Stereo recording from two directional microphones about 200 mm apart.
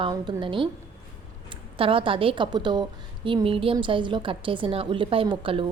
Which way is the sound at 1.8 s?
25° right (ahead or behind).